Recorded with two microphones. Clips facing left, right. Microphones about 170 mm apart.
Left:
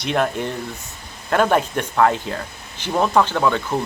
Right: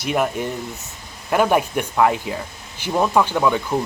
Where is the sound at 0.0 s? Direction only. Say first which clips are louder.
Even; 10° right (ahead or behind).